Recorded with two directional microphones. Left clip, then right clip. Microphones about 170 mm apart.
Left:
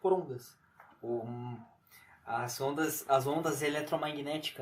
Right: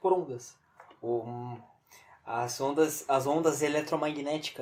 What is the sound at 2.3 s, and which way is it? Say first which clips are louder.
Speech: right 3 dB; 45° right (ahead or behind).